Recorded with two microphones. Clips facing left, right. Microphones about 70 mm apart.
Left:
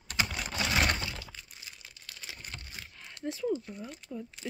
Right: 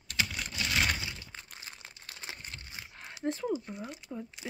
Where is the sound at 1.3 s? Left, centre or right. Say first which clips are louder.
Right 3 dB; right.